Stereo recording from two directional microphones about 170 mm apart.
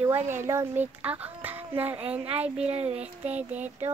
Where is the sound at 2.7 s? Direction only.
35° right (ahead or behind).